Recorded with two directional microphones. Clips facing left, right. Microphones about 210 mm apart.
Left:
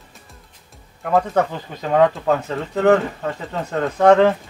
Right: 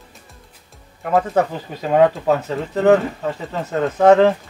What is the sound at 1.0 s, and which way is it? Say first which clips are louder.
Speech: right 1 dB; 5° right (ahead or behind).